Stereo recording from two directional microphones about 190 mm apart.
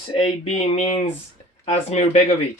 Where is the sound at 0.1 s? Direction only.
30° left (ahead or behind).